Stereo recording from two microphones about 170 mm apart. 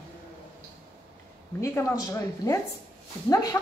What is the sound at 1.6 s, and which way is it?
A woman's voice, 15° left (ahead or behind).